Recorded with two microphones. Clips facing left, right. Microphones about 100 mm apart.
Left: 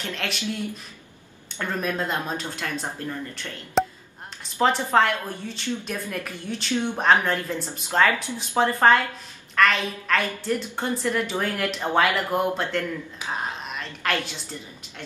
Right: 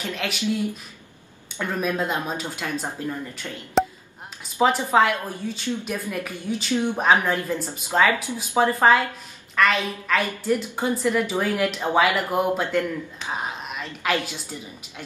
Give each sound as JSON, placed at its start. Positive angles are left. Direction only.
{"t": 0.0, "sound": "a woman's voice", "side_deg": -5}
{"t": 1.6, "sound": "a woman's voice", "side_deg": -5}
{"t": 13.2, "sound": "speech", "side_deg": 10}
{"t": 13.7, "sound": "a woman's voice", "side_deg": -5}